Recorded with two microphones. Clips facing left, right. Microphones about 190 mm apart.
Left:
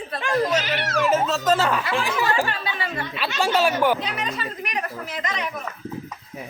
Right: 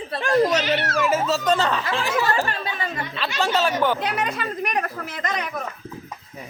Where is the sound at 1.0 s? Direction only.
5° right (ahead or behind); by 2.4 s 15° left (ahead or behind).